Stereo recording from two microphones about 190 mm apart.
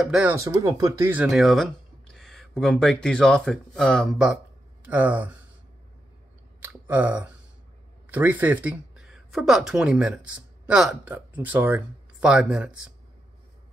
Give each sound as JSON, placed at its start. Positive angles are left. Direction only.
{"t": 0.0, "sound": "speech", "side_deg": -5}
{"t": 0.3, "sound": "speech", "side_deg": -15}
{"t": 1.2, "sound": "speech", "side_deg": 0}
{"t": 6.6, "sound": "speech", "side_deg": -5}